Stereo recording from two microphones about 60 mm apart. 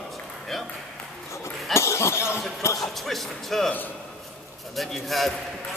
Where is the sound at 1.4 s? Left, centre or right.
Left.